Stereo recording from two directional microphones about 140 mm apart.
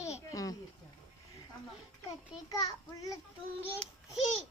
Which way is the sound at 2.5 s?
25° left (ahead or behind).